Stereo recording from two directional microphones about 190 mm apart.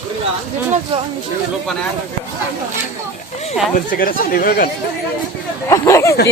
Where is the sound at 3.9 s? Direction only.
50° left (ahead or behind).